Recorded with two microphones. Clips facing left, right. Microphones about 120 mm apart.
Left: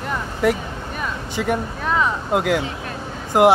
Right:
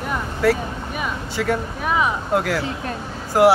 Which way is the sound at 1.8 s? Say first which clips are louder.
Even; 10° right (ahead or behind).